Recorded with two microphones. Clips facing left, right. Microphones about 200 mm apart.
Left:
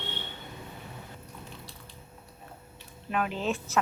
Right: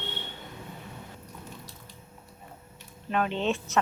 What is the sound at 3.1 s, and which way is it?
Speech, 5° left (ahead or behind).